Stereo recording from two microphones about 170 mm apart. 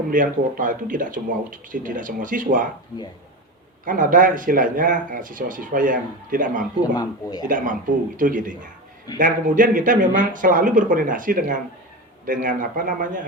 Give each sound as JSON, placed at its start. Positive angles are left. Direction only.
{"t": 0.1, "sound": "speech", "side_deg": -50}
{"t": 3.8, "sound": "speech", "side_deg": -50}
{"t": 6.9, "sound": "speech", "side_deg": 25}
{"t": 7.4, "sound": "speech", "side_deg": -50}